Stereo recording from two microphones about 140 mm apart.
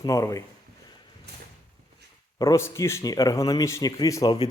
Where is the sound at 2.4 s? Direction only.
25° left (ahead or behind).